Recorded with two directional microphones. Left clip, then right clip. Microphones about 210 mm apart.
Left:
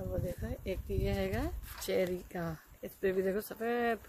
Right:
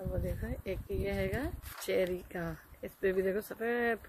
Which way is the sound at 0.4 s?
10° left (ahead or behind).